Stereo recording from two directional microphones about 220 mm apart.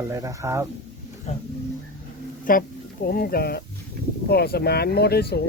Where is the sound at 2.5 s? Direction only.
40° left (ahead or behind).